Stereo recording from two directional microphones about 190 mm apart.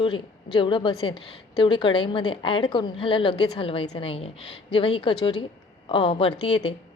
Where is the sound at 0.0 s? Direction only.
25° left (ahead or behind).